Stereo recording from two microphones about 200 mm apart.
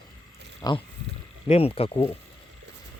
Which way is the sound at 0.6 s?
20° left (ahead or behind).